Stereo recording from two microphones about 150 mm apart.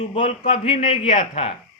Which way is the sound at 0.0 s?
40° left (ahead or behind).